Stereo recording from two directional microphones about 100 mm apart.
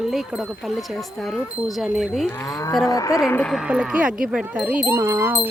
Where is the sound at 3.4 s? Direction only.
Centre (ahead or behind).